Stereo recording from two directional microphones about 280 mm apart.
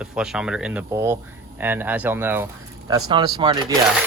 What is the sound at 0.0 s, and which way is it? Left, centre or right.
Speech, centre.